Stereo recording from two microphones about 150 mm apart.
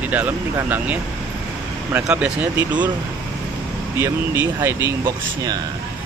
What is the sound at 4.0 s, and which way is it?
Speech, 20° right (ahead or behind).